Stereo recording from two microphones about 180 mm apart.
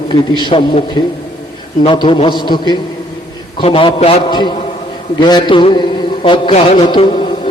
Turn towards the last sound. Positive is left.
turn(degrees=30)  # may be behind; listen again after turning